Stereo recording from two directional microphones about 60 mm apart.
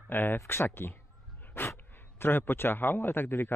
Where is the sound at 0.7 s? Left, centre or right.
Left.